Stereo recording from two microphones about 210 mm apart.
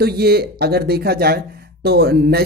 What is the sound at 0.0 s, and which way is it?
Speech, 50° right (ahead or behind).